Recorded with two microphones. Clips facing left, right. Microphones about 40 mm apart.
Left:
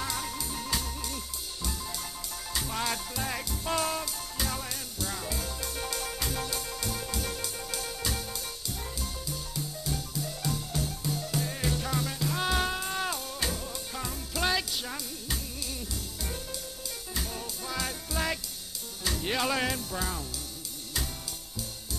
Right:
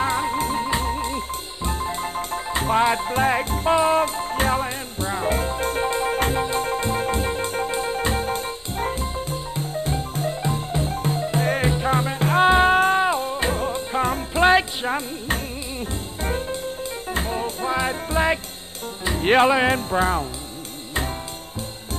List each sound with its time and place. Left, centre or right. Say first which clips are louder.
0.0 s music: right 13 dB; right
19.5 s speech: right 11 dB; right